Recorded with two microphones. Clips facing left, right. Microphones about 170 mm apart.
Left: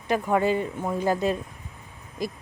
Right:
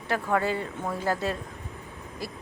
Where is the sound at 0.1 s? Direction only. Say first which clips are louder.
Left 4 dB; 15° left (ahead or behind).